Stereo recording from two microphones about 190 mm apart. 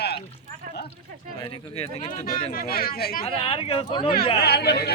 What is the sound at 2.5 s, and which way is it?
Speech, 50° left (ahead or behind).